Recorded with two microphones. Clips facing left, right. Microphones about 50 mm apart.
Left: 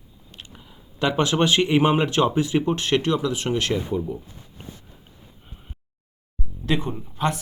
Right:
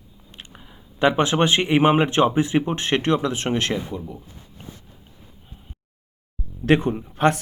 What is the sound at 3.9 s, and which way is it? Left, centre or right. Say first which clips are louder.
Speech: left 6 dB; centre.